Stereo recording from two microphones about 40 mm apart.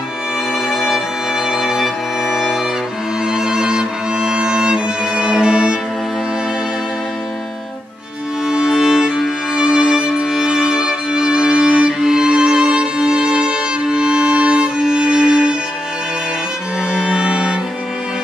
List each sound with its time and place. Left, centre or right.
0.7 s music: centre
8.5 s music: centre
16.9 s music: right